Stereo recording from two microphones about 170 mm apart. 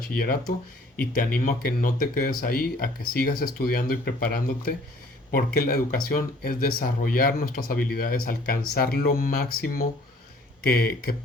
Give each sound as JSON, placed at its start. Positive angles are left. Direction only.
{"t": 0.2, "sound": "speech", "side_deg": 60}